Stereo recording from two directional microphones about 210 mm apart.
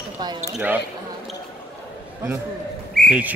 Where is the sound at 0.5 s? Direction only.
10° right (ahead or behind).